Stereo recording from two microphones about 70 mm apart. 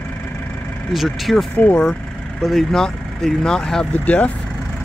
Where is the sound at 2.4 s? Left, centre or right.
Centre; by 4.3 s left.